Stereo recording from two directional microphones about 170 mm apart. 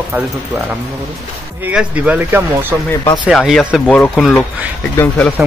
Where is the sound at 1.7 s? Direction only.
5° right (ahead or behind); by 5.3 s 10° left (ahead or behind).